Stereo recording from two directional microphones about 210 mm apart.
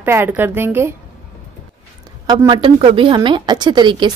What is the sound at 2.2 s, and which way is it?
A woman's voice, 20° right (ahead or behind).